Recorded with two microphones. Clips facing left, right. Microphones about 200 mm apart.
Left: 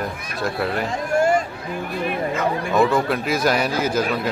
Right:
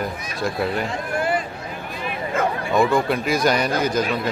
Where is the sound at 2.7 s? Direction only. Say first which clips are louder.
Even; centre (ahead or behind).